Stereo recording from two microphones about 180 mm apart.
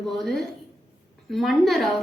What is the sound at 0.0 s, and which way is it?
A woman's voice, centre (ahead or behind).